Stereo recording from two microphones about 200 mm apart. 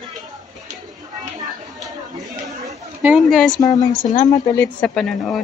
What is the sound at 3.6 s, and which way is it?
A woman's voice, 20° left (ahead or behind).